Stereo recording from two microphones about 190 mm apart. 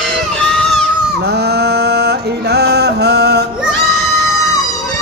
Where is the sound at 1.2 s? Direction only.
60° right (ahead or behind).